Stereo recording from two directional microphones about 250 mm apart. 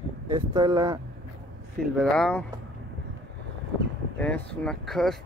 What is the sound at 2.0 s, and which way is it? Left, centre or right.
Speech, centre.